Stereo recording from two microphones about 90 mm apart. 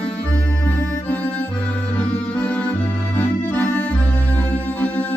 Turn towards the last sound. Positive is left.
turn(degrees=15)  # may be behind; listen again after turning